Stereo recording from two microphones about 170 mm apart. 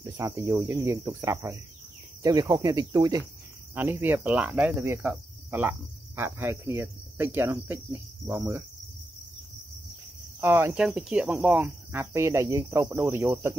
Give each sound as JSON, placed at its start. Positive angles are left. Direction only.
{"t": 0.0, "sound": "cricket", "side_deg": -15}
{"t": 2.2, "sound": "speech", "side_deg": -20}
{"t": 3.7, "sound": "cricket", "side_deg": -10}
{"t": 10.4, "sound": "cricket", "side_deg": -10}